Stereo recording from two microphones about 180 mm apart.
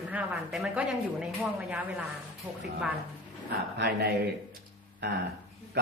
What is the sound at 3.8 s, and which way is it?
Speech, 60° right (ahead or behind).